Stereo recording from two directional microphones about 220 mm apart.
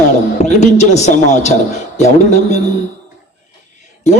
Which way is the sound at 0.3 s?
30° left (ahead or behind).